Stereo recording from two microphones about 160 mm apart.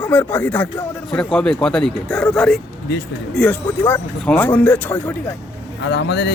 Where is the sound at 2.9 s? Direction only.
90° left.